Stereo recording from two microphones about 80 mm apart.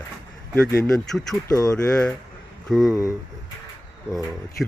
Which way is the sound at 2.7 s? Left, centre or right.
Centre.